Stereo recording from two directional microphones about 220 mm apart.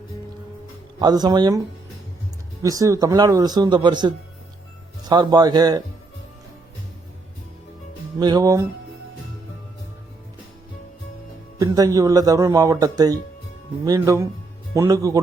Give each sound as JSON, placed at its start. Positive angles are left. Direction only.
{"t": 0.9, "sound": "speech", "side_deg": -20}
{"t": 2.6, "sound": "speech", "side_deg": -15}
{"t": 8.2, "sound": "speech", "side_deg": -15}
{"t": 11.6, "sound": "speech", "side_deg": -15}